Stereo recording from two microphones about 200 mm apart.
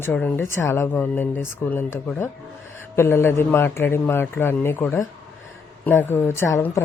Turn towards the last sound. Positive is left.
turn(degrees=15)  # may be behind; listen again after turning